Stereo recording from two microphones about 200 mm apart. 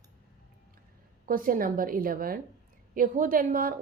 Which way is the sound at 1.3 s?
45° right (ahead or behind).